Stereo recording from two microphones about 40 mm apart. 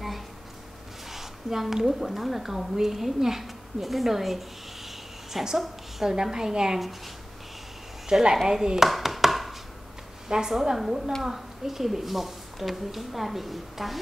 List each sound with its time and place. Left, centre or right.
1.1 s a woman's voice: centre
8.1 s a woman's voice: centre
8.5 s a sound: centre
10.2 s a woman's voice: centre